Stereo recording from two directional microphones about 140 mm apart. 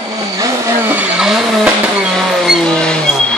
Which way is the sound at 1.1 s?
5° right (ahead or behind).